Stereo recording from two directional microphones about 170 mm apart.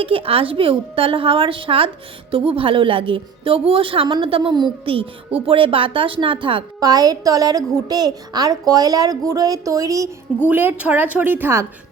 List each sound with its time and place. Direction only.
0.0 s a woman's voice: 35° right (ahead or behind); by 11.6 s 15° right (ahead or behind)